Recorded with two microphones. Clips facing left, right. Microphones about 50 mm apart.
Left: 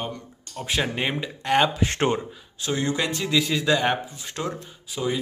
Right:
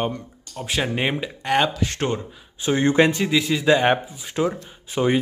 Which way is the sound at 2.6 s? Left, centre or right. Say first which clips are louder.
Right 8 dB; right.